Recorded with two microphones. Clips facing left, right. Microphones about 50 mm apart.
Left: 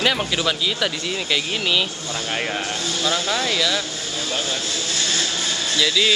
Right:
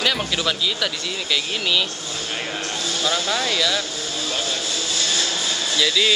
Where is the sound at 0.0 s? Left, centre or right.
Centre.